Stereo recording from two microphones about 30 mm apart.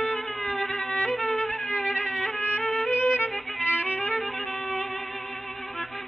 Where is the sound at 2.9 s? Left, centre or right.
Left.